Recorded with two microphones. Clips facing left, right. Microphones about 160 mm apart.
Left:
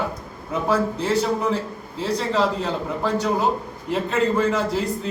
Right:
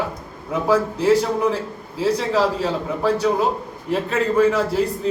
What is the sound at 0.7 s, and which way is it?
A man's voice, 10° right (ahead or behind).